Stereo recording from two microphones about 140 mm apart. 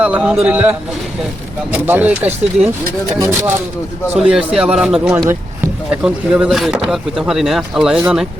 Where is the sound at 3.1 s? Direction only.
25° right (ahead or behind).